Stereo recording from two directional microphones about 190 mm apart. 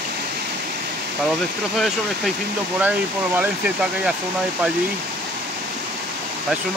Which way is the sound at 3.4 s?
5° right (ahead or behind).